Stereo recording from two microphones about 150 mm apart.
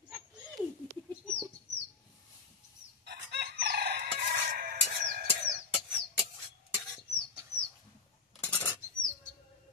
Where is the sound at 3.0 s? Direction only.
90° right.